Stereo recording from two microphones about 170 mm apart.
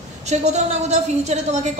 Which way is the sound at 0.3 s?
40° right (ahead or behind).